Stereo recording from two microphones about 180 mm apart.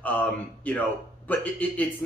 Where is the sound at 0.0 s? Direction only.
10° left (ahead or behind).